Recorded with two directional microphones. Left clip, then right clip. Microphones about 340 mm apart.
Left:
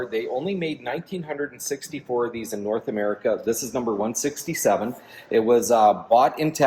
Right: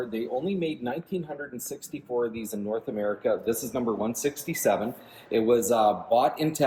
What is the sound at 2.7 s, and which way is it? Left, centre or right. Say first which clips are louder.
Speech: left 4 dB; centre.